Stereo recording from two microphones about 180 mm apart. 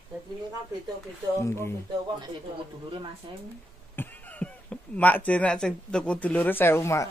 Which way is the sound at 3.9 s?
10° left (ahead or behind).